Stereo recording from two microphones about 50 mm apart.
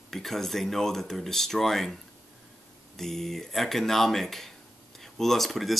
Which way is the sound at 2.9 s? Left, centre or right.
Centre.